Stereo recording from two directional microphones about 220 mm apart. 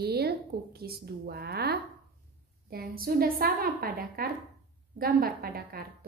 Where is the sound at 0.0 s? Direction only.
45° right (ahead or behind).